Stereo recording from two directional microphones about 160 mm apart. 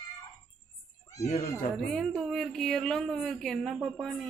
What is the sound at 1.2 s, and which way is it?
Speech, 45° left (ahead or behind).